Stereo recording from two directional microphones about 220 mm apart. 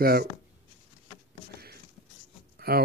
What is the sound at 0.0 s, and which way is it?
Speech, 45° right (ahead or behind).